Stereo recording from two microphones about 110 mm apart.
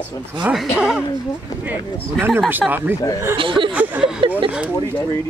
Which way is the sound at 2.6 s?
5° left (ahead or behind).